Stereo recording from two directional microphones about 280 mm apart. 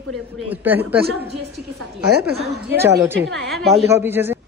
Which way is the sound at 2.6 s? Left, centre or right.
Centre.